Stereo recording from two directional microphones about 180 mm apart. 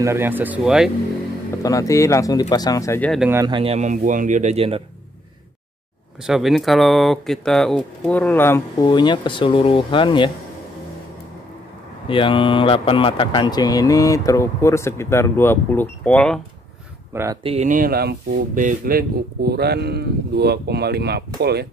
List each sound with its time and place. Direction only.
0.0 s speech: 15° right (ahead or behind)
1.6 s speech: 20° left (ahead or behind)
3.3 s speech: 15° right (ahead or behind)
3.5 s speech: 35° right (ahead or behind)
6.2 s speech: centre (ahead or behind)
8.8 s speech: 25° left (ahead or behind)
12.1 s speech: 30° left (ahead or behind); by 16.3 s 5° left (ahead or behind)
17.1 s speech: 15° right (ahead or behind)
17.4 s speech: 30° right (ahead or behind)
17.6 s speech: 50° right (ahead or behind)